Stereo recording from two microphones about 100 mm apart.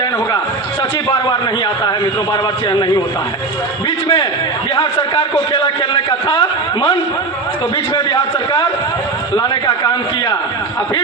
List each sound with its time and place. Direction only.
1.3 s a man's voice: 45° left (ahead or behind)
3.8 s a sound: 50° left (ahead or behind)
4.7 s a man's voice: 50° left (ahead or behind)
7.9 s a man's voice: 45° left (ahead or behind)